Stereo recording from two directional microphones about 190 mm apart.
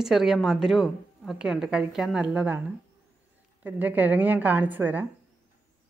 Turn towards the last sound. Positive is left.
turn(degrees=-10)  # may be behind; listen again after turning